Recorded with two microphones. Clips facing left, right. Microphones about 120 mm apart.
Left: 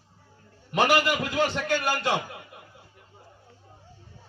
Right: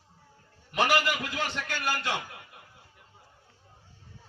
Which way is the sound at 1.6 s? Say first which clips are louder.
Left 6 dB; 25° left (ahead or behind).